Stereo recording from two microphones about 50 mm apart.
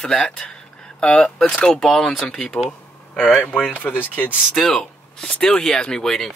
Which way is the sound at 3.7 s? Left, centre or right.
Left.